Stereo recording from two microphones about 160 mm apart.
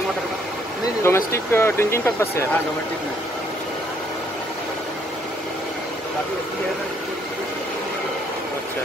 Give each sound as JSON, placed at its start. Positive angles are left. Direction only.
{"t": 1.0, "sound": "speech", "side_deg": 15}